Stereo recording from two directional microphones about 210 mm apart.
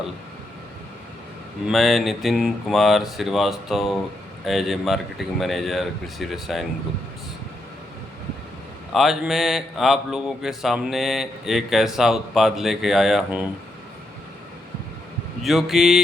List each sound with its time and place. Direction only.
1.6 s speech: centre (ahead or behind)
8.9 s speech: centre (ahead or behind)
15.4 s speech: centre (ahead or behind)